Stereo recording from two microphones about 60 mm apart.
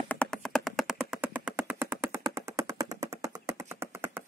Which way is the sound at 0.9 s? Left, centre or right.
Centre.